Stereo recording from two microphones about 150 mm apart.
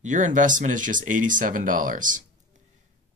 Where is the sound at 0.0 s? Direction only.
55° right (ahead or behind).